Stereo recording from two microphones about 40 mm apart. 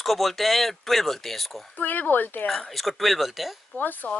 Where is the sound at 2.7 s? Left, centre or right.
Centre.